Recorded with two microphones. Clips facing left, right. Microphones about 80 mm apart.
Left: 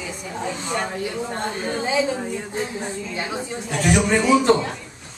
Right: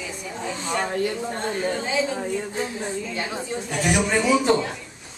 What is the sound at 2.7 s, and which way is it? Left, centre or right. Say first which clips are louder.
Speech: even; centre.